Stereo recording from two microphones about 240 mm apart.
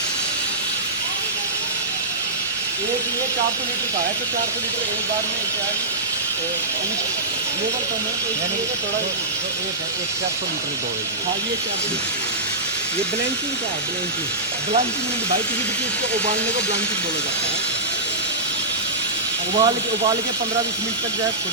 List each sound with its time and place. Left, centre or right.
19.5 s speech: centre